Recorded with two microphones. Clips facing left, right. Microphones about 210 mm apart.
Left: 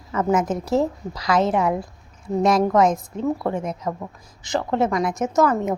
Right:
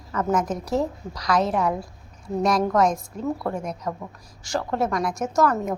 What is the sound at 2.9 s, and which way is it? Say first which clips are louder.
A woman's voice: left 4 dB; 25° left (ahead or behind).